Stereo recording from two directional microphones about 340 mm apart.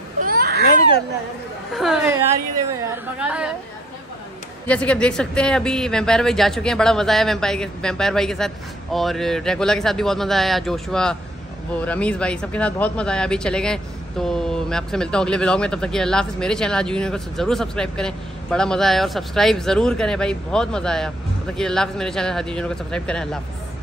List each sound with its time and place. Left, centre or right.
0.2 s a sound: right
1.7 s speech: centre
4.6 s speech: centre